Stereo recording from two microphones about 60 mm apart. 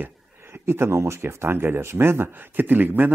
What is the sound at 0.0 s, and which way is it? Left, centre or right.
Speech, right.